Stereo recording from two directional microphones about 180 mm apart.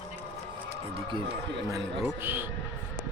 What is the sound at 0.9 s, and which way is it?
Speech, 25° right (ahead or behind).